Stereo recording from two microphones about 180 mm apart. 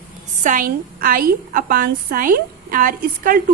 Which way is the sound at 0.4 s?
50° right (ahead or behind).